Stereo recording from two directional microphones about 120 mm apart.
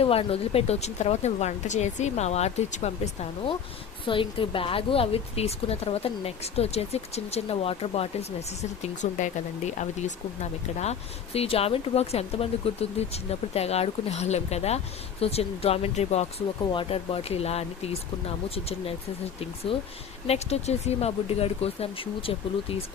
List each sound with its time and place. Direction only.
0.0 s speech: 55° left (ahead or behind)
4.0 s speech: 45° left (ahead or behind); by 10.9 s 70° left (ahead or behind)
11.3 s a woman's voice: 55° left (ahead or behind)
20.2 s speech: 60° left (ahead or behind)